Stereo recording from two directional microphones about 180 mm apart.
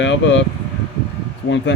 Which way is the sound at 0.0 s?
90° left.